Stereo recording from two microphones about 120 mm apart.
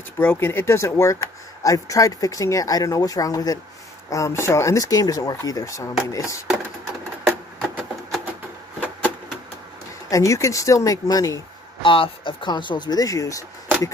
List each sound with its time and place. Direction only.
0.2 s speech: 20° left (ahead or behind)
7.2 s a sound: centre (ahead or behind)
10.0 s speech: 25° left (ahead or behind)
11.8 s speech: 45° left (ahead or behind); by 13.4 s 30° left (ahead or behind)